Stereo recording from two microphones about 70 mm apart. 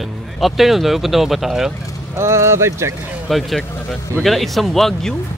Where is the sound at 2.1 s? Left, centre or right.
Right.